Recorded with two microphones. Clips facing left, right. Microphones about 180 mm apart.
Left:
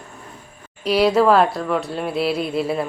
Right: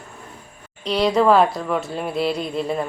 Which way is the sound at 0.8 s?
10° left (ahead or behind).